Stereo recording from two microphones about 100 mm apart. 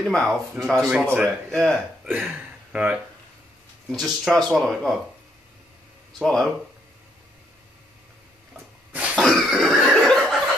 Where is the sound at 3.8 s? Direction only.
Centre (ahead or behind).